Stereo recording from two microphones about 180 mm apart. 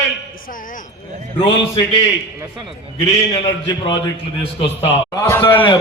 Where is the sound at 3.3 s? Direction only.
30° left (ahead or behind).